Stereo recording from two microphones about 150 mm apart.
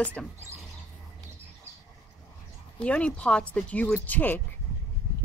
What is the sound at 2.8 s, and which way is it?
Speech, 5° left (ahead or behind).